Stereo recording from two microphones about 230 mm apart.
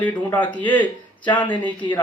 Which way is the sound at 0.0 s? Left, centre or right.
Centre.